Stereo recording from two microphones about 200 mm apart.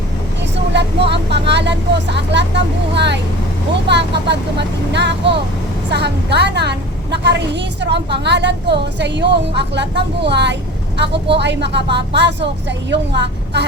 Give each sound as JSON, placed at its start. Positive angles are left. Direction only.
{"t": 0.7, "sound": "vehicle", "side_deg": -60}
{"t": 2.9, "sound": "a woman's voice", "side_deg": -60}